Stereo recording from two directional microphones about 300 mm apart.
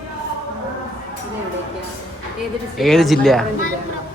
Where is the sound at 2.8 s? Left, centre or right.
Centre.